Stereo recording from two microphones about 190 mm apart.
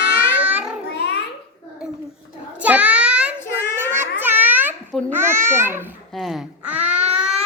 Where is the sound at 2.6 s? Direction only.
5° right (ahead or behind).